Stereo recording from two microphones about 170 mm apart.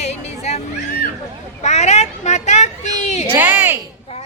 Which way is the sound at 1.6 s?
40° left (ahead or behind).